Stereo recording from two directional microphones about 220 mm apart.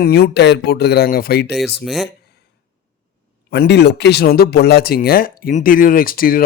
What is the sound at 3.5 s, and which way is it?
Speech, 50° left (ahead or behind).